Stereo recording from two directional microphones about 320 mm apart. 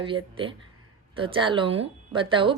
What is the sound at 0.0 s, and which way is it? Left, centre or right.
A woman's voice, centre.